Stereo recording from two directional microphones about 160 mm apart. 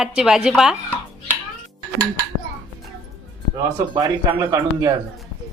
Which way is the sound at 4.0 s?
20° right (ahead or behind).